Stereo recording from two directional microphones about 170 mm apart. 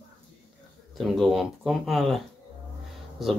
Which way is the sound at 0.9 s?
Centre (ahead or behind).